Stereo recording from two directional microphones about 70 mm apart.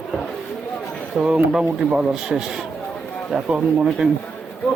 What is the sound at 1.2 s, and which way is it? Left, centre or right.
A man's voice, centre.